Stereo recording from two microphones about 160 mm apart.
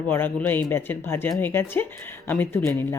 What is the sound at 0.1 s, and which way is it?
Speech, 15° left (ahead or behind).